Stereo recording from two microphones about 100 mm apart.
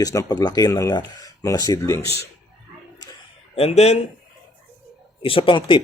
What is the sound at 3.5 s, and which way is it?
Speech, 90° left.